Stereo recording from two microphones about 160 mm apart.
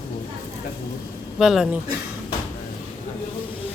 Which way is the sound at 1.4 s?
5° right (ahead or behind).